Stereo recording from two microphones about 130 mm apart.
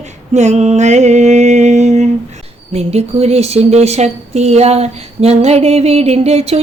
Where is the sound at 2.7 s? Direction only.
55° right (ahead or behind).